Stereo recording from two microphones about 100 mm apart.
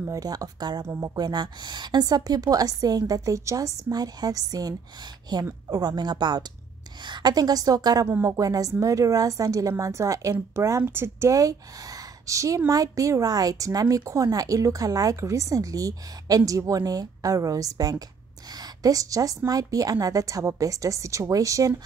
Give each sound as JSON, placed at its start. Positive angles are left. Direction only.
{"t": 0.0, "sound": "a woman's voice", "side_deg": -35}
{"t": 0.8, "sound": "speech", "side_deg": -25}
{"t": 1.1, "sound": "a woman's voice", "side_deg": -45}
{"t": 8.1, "sound": "a woman's voice", "side_deg": -30}